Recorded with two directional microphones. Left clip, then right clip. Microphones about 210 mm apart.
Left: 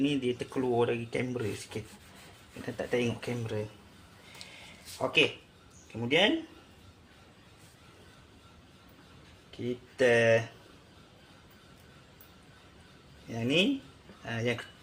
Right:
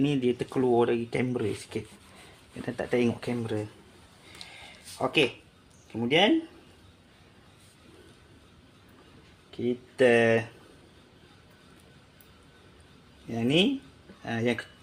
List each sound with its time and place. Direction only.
0.0 s speech: 55° right (ahead or behind)
5.0 s speech: 50° right (ahead or behind)
9.6 s speech: 50° right (ahead or behind)
13.3 s speech: 45° right (ahead or behind)